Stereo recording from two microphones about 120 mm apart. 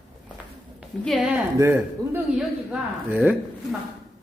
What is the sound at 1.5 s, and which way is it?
Speech, 20° right (ahead or behind).